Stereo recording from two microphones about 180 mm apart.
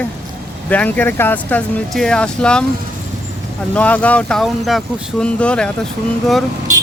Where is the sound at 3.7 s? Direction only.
10° left (ahead or behind).